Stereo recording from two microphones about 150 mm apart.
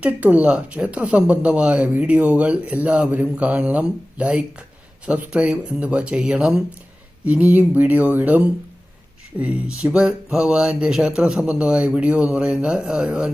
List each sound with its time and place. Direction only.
0.0 s speech: 10° right (ahead or behind)